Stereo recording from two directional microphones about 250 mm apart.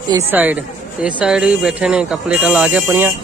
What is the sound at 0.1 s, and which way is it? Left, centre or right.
Speech, centre.